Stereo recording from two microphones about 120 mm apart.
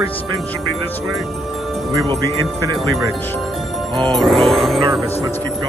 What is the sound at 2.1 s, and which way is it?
Speech, 30° right (ahead or behind).